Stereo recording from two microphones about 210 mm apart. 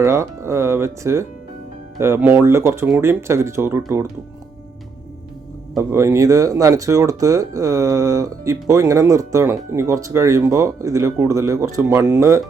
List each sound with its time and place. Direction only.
0.0 s speech: 15° right (ahead or behind)
5.7 s speech: 15° right (ahead or behind)